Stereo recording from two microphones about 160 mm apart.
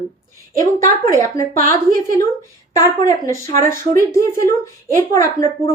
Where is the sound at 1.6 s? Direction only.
60° right (ahead or behind).